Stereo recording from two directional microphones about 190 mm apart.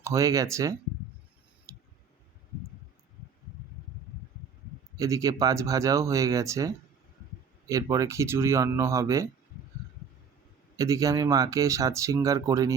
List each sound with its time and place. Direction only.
0.0 s speech: 15° right (ahead or behind)
4.9 s speech: 15° right (ahead or behind)
10.8 s speech: 15° right (ahead or behind)